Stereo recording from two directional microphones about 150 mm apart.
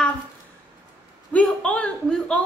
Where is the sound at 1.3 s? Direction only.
5° left (ahead or behind).